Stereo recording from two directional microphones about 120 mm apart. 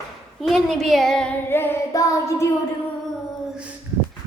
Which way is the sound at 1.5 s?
15° left (ahead or behind).